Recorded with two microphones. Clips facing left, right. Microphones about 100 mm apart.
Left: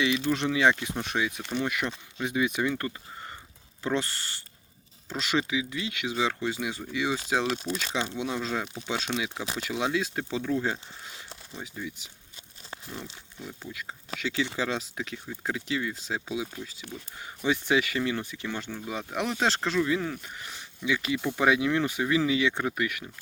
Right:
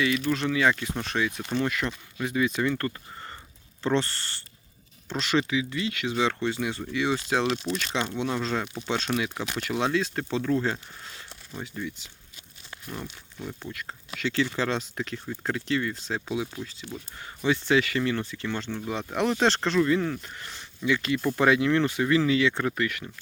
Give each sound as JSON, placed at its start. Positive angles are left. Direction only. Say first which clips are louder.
{"t": 0.3, "sound": "speech", "louder": "left 2 dB", "side_deg": 20}
{"t": 9.1, "sound": "speech", "louder": "right 4 dB", "side_deg": -10}
{"t": 9.6, "sound": "speech", "louder": "right 3 dB", "side_deg": 10}
{"t": 13.4, "sound": "speech", "louder": "right 4 dB", "side_deg": -10}
{"t": 13.7, "sound": "speech", "louder": "even", "side_deg": 5}